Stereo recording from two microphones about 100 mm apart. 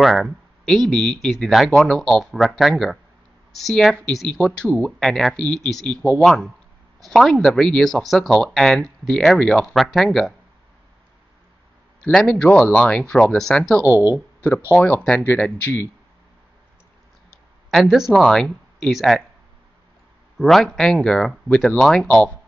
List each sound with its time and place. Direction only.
0.0 s speech: centre (ahead or behind)
4.4 s speech: 15° left (ahead or behind)
5.0 s speech: 5° left (ahead or behind)
12.0 s speech: 10° left (ahead or behind)
13.8 s speech: 20° right (ahead or behind)
14.1 s speech: 20° left (ahead or behind)
17.6 s speech: centre (ahead or behind)
20.3 s speech: centre (ahead or behind)